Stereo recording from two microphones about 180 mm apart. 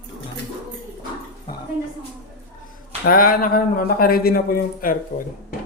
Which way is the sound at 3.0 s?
55° left (ahead or behind).